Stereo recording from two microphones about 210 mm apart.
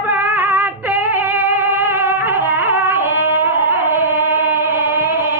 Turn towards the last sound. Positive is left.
turn(degrees=-10)  # may be behind; listen again after turning